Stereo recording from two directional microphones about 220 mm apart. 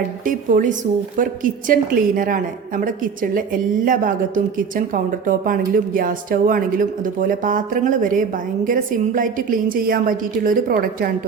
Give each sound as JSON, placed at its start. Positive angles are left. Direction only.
{"t": 0.3, "sound": "speech", "side_deg": -35}